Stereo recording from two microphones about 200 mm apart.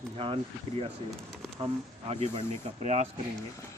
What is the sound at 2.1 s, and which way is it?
Speech, 30° right (ahead or behind).